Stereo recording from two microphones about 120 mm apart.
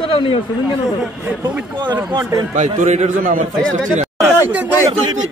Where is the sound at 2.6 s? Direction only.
80° right.